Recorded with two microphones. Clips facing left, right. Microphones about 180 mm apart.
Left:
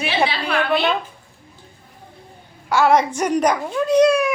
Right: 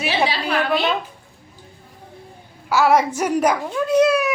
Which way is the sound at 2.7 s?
5° right (ahead or behind).